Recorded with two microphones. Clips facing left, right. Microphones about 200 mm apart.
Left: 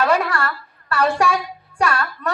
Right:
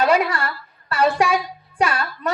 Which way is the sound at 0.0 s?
20° right (ahead or behind).